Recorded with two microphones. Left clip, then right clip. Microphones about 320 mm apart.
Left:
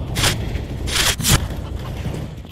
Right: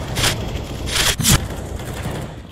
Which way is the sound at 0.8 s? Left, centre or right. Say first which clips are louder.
Right 1 dB; centre.